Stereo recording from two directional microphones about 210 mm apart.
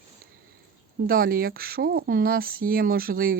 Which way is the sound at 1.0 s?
45° right (ahead or behind).